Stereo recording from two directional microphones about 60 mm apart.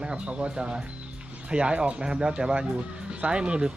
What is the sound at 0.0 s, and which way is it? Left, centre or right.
Speech, centre.